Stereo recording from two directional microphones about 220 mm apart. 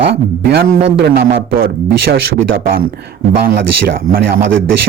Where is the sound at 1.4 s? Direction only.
60° right (ahead or behind).